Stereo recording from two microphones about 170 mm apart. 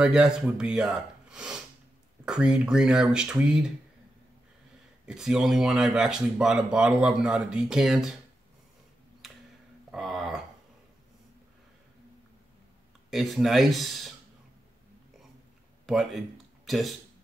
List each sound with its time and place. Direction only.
0.0 s speech: 5° right (ahead or behind)
5.0 s speech: 5° right (ahead or behind)
9.8 s a sound: centre (ahead or behind)
13.1 s speech: centre (ahead or behind)
15.9 s speech: centre (ahead or behind)